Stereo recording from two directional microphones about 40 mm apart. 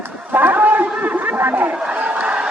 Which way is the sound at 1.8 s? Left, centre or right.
Right.